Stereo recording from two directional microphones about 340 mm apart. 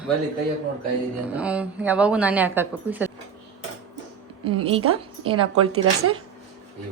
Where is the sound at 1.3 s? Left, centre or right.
Centre.